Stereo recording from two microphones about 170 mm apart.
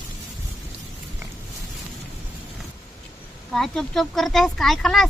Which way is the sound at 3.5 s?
Centre (ahead or behind).